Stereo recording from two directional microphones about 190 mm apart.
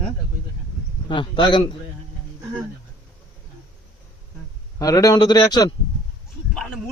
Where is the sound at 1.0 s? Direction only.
25° left (ahead or behind).